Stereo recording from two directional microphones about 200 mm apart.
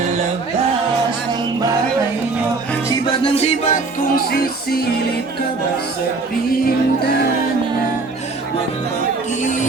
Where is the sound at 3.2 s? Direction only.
30° left (ahead or behind).